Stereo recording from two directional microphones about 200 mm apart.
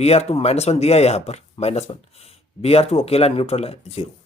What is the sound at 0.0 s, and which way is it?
Speech, 30° left (ahead or behind).